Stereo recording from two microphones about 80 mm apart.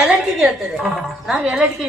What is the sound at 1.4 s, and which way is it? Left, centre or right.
Speech, centre.